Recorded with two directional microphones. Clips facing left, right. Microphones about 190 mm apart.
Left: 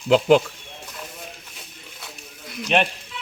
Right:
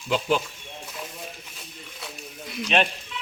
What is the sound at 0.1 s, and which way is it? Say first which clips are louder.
Speech: left 9 dB; 85° left.